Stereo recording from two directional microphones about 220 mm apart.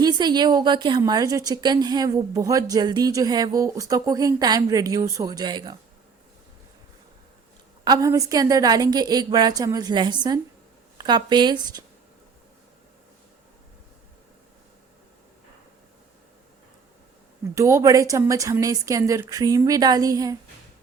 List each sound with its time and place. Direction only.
0.0 s a woman's voice: 20° right (ahead or behind)
7.9 s a woman's voice: 15° right (ahead or behind)
17.5 s a woman's voice: 15° right (ahead or behind)